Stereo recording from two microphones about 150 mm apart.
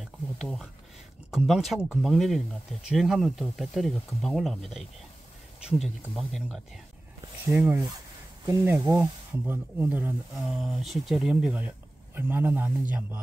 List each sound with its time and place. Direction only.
0.0 s speech: centre (ahead or behind)
7.5 s speech: 15° right (ahead or behind)
10.3 s speech: centre (ahead or behind)